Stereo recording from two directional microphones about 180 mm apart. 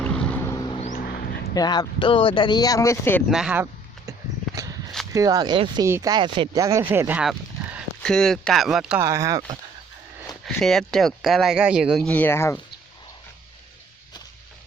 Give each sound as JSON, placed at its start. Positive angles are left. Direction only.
{"t": 0.0, "sound": "vehicle", "side_deg": 5}
{"t": 0.8, "sound": "dog", "side_deg": 45}
{"t": 1.0, "sound": "a sound", "side_deg": 60}
{"t": 1.5, "sound": "speech", "side_deg": 20}
{"t": 3.2, "sound": "speech", "side_deg": -5}
{"t": 5.1, "sound": "speech", "side_deg": -20}
{"t": 9.0, "sound": "speech", "side_deg": -15}
{"t": 10.4, "sound": "speech", "side_deg": 0}